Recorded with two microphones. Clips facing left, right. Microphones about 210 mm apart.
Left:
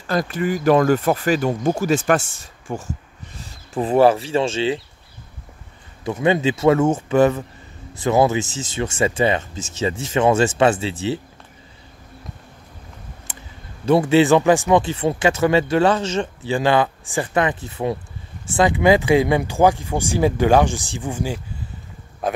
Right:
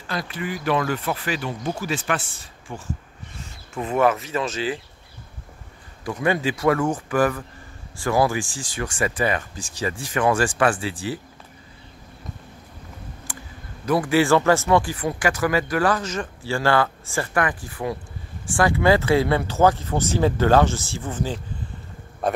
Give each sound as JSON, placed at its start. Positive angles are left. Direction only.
{"t": 0.0, "sound": "speech", "side_deg": 45}
{"t": 3.4, "sound": "speech", "side_deg": 30}
{"t": 6.0, "sound": "speech", "side_deg": 25}
{"t": 13.3, "sound": "a sound", "side_deg": 20}
{"t": 13.8, "sound": "speech", "side_deg": 25}
{"t": 22.2, "sound": "a man's voice", "side_deg": 0}